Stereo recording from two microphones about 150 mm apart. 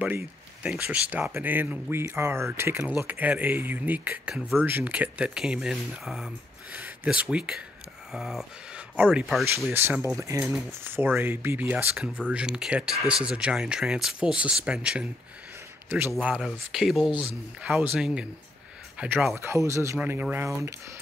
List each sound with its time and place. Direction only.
0.7 s speech: 10° right (ahead or behind)
10.0 s speech: 20° right (ahead or behind)
16.3 s speech: 5° right (ahead or behind)